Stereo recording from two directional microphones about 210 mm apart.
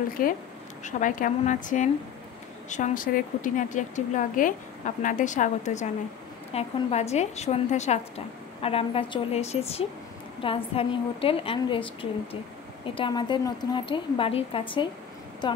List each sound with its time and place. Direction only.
0.2 s a woman's voice: 40° left (ahead or behind); by 14.9 s 25° left (ahead or behind)